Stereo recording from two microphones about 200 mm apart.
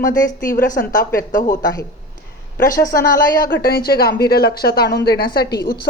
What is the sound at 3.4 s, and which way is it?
A woman's voice, 45° left (ahead or behind).